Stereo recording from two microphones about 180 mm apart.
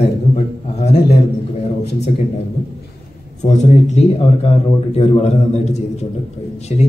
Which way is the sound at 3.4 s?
40° left (ahead or behind).